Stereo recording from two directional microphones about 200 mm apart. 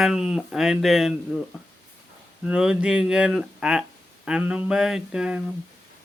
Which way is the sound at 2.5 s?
5° right (ahead or behind).